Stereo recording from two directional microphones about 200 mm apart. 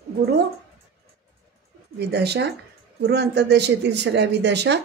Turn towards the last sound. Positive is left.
turn(degrees=-60)  # may be behind; listen again after turning